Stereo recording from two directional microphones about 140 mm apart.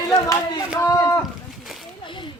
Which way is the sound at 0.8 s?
20° left (ahead or behind).